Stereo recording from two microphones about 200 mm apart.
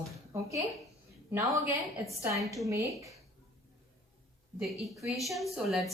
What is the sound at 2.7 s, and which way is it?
Speech, 15° right (ahead or behind).